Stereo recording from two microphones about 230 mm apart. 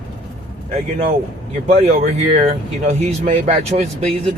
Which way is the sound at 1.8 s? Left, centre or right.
Right.